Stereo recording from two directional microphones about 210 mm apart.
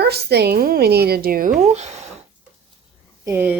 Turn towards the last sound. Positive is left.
turn(degrees=-10)  # may be behind; listen again after turning